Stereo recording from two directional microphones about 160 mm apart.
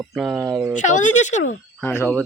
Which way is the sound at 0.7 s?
50° left (ahead or behind).